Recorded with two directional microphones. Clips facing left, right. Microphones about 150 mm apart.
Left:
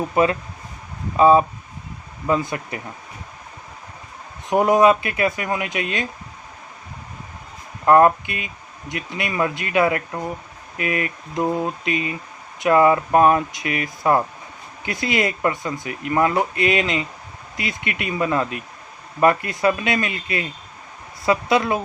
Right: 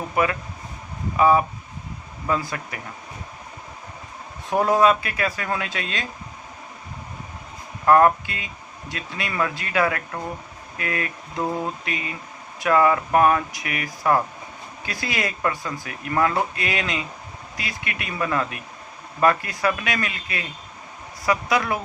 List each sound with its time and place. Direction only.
0.1 s speech: 25° left (ahead or behind)
4.4 s speech: 20° left (ahead or behind)
7.9 s speech: 20° left (ahead or behind)